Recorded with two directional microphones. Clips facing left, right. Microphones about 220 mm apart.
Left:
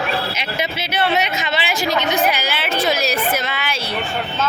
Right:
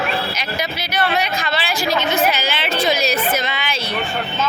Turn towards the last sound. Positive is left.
turn(degrees=10)  # may be behind; listen again after turning